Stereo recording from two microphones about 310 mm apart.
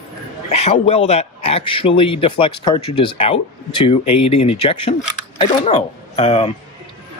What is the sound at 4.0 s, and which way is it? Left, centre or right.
Speech, left.